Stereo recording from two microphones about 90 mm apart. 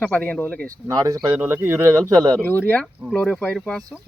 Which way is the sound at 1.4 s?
25° right (ahead or behind).